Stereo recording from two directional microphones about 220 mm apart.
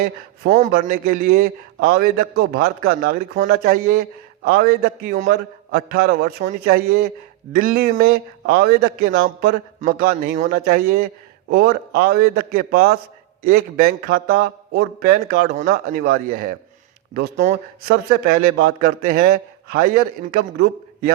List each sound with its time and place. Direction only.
0.5 s a man's voice: 35° right (ahead or behind)